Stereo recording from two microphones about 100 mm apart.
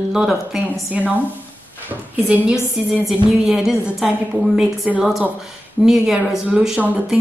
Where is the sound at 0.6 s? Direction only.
15° right (ahead or behind).